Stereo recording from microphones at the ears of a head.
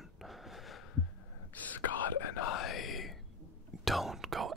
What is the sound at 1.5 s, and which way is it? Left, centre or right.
Whispering, left.